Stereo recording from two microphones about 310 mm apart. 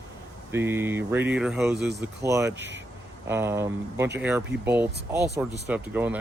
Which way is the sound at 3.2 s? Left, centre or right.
Centre.